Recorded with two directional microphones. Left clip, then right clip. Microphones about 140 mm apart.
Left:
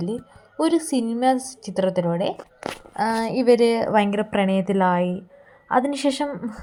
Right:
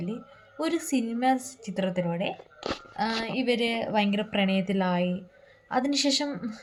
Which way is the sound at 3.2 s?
45° left (ahead or behind).